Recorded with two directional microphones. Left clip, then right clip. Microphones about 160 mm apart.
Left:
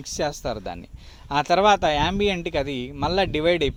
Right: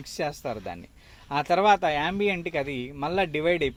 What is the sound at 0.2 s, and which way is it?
Speech, 35° left (ahead or behind).